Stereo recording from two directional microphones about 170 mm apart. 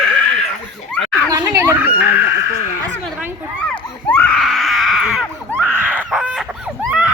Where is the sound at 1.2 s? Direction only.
15° right (ahead or behind).